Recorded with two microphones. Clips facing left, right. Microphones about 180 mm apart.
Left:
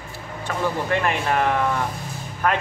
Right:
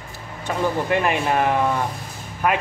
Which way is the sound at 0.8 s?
15° right (ahead or behind).